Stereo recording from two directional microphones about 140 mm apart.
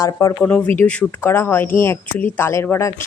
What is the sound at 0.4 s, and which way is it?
Speech, 10° left (ahead or behind).